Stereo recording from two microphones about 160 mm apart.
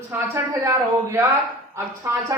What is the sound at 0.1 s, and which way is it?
Speech, 20° right (ahead or behind).